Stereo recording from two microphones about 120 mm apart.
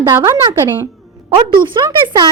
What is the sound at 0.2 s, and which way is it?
Speech, 30° right (ahead or behind).